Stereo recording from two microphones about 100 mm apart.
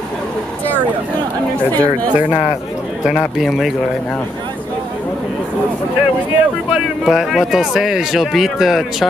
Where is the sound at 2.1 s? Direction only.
15° right (ahead or behind).